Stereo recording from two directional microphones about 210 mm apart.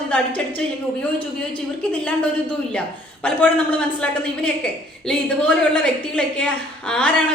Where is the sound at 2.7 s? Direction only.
5° left (ahead or behind).